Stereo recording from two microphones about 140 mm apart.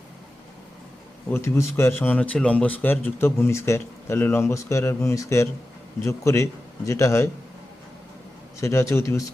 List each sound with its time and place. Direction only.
1.3 s a man's voice: 20° left (ahead or behind)
8.6 s a man's voice: 20° left (ahead or behind)